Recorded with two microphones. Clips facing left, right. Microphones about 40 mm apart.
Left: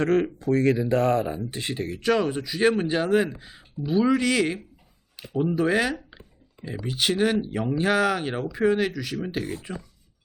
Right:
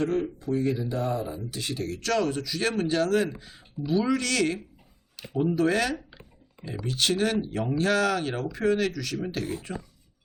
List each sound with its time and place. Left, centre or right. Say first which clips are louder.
0.1 s speech: left 5 dB; left
1.3 s speech: left 3 dB; left; by 9.6 s centre